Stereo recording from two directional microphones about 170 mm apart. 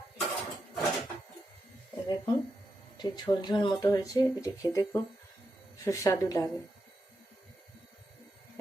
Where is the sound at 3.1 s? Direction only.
25° left (ahead or behind).